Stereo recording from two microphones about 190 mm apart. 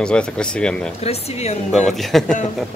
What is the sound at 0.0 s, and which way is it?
Speech, 5° left (ahead or behind).